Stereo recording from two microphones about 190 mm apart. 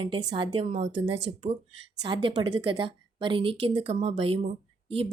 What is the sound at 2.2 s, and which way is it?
A woman's voice, 25° right (ahead or behind).